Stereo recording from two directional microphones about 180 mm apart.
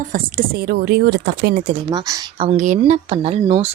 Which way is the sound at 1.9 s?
30° right (ahead or behind).